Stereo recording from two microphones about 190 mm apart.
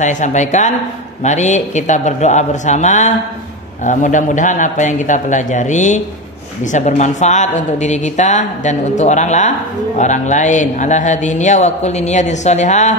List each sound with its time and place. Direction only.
0.0 s a man's voice: 40° left (ahead or behind)